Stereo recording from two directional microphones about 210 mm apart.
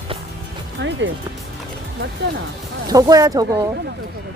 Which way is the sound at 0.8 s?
55° right (ahead or behind).